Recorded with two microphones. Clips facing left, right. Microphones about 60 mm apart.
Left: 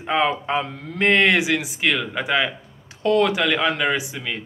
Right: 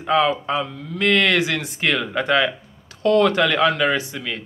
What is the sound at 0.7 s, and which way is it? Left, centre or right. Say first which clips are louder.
Speech: right 1 dB; left.